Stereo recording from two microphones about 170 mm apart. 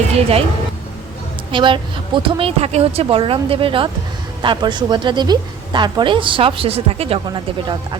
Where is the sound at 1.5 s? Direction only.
30° right (ahead or behind).